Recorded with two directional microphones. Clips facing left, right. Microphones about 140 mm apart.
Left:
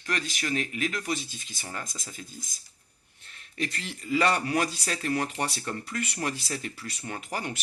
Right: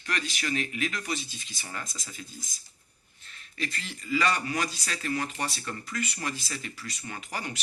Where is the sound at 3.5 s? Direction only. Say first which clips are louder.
Left 3 dB; 60° left (ahead or behind).